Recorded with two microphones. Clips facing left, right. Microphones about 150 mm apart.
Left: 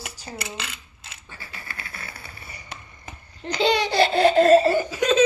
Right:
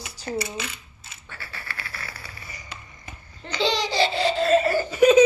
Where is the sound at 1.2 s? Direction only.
15° left (ahead or behind).